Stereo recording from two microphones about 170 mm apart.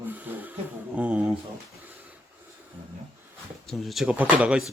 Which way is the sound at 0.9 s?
10° right (ahead or behind).